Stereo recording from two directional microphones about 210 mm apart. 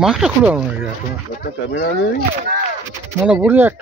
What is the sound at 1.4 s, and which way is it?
Speech, 45° left (ahead or behind).